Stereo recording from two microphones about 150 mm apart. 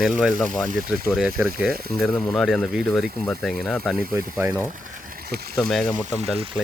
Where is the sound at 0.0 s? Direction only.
Centre (ahead or behind).